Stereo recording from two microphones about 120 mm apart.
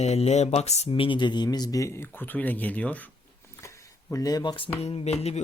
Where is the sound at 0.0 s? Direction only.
65° left (ahead or behind).